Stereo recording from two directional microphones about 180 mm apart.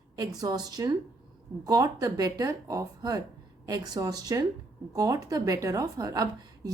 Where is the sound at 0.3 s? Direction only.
20° right (ahead or behind).